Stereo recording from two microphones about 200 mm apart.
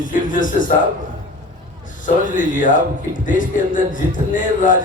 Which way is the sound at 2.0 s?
40° left (ahead or behind).